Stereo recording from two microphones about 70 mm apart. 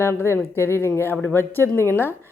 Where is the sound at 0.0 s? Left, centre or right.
Left.